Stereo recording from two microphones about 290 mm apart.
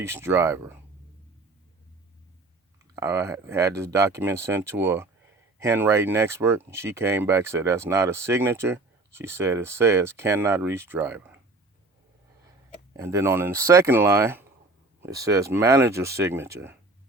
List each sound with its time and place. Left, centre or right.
0.0 s speech: centre
2.9 s speech: centre
12.9 s speech: centre